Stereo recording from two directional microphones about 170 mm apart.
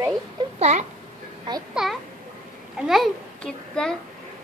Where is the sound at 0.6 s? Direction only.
40° right (ahead or behind).